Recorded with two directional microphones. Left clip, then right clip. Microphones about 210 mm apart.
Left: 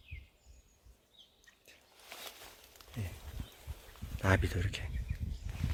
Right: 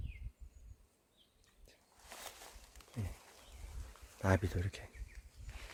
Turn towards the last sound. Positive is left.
turn(degrees=5)  # may be behind; listen again after turning